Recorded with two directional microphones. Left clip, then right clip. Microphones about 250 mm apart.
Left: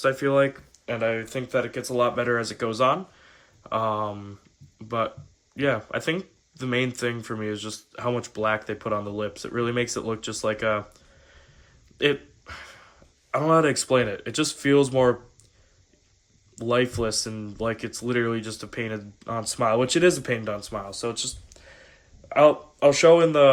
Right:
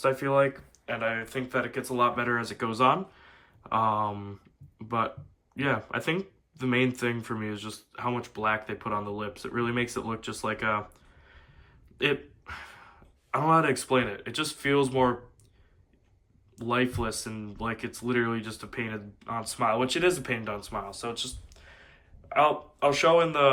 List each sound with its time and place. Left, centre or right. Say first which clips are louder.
0.0 s speech: left 3 dB; centre
11.9 s a sound: left 4 dB; centre
13.3 s speech: left 3 dB; centre
16.6 s speech: left 5 dB; centre